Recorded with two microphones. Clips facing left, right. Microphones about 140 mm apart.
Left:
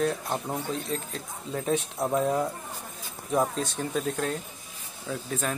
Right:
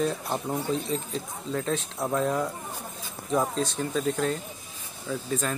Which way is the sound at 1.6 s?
10° left (ahead or behind).